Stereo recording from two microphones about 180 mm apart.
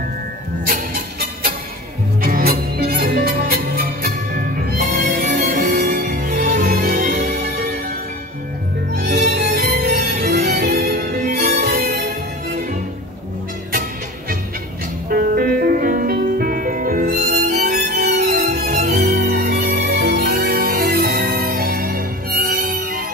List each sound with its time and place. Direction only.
2.2 s music: 55° right (ahead or behind)
8.9 s music: 55° right (ahead or behind)
15.0 s music: 55° right (ahead or behind)
18.8 s music: 40° right (ahead or behind)
19.0 s music: 60° right (ahead or behind)